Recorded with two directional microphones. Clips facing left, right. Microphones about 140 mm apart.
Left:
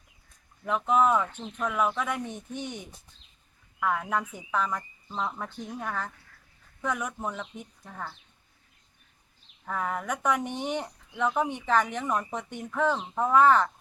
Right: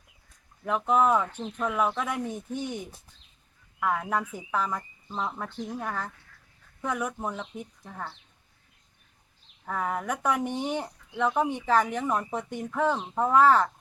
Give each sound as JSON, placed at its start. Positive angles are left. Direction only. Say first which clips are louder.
{"t": 0.6, "sound": "speech", "louder": "even", "side_deg": -5}
{"t": 9.6, "sound": "speech", "louder": "right 1 dB", "side_deg": -5}